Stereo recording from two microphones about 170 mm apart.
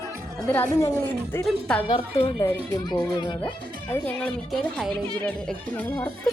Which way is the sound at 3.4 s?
10° left (ahead or behind).